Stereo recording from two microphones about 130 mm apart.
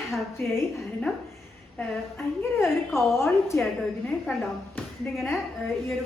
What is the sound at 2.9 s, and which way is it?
Speech, 20° left (ahead or behind).